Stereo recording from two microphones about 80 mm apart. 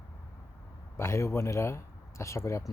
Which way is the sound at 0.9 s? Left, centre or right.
Left.